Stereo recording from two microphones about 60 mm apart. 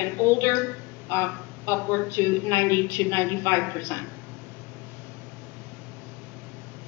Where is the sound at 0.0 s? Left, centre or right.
Left.